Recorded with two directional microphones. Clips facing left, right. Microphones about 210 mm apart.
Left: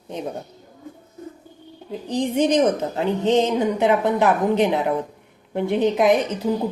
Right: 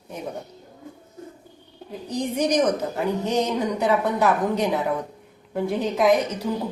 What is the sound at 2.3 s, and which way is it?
A woman's voice, 25° left (ahead or behind).